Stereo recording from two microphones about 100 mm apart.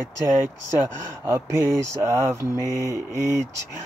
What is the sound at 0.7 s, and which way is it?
Speech, 30° right (ahead or behind).